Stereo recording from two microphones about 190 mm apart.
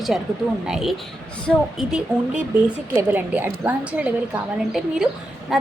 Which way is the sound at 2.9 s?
10° right (ahead or behind).